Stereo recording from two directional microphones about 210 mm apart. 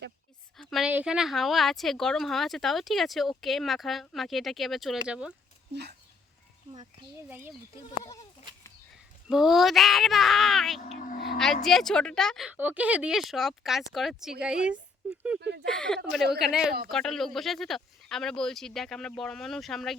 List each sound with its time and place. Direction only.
0.5 s a woman's voice: centre (ahead or behind)
7.3 s speech: 10° right (ahead or behind)
9.3 s a woman's voice: centre (ahead or behind)
10.8 s speech: 35° left (ahead or behind)
11.3 s a woman's voice: centre (ahead or behind)
15.4 s speech: 55° right (ahead or behind)
15.6 s a woman's voice: 5° left (ahead or behind)